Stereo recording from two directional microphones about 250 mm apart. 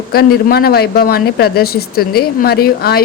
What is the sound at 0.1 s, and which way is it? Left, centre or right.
Speech, left.